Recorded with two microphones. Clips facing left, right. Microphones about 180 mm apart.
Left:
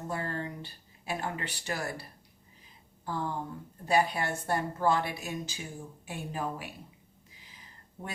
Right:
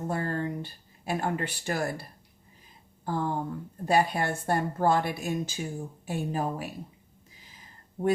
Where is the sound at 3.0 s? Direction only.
50° right (ahead or behind).